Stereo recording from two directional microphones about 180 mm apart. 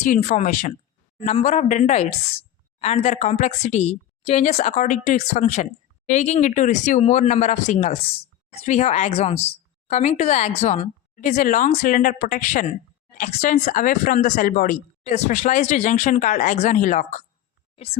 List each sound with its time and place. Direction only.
0.0 s a woman's voice: 45° left (ahead or behind)
15.0 s speech: 40° left (ahead or behind)